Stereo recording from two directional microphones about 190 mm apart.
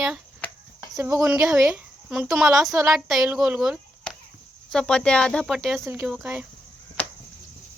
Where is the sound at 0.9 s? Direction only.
15° right (ahead or behind).